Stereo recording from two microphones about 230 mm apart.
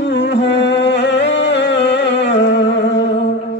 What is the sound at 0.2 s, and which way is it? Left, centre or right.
Music, left.